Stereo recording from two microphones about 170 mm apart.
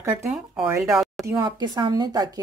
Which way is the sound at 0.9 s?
Centre (ahead or behind).